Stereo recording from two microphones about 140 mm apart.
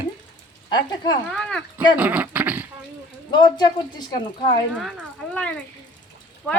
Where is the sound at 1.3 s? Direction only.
5° left (ahead or behind).